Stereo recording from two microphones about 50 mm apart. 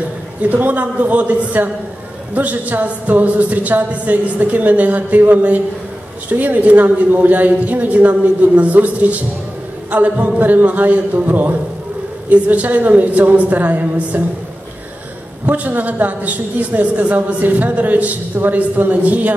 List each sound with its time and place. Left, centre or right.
0.4 s speech: right
15.4 s speech: right